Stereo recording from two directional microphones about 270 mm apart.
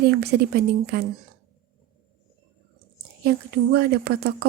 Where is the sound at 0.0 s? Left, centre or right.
Right.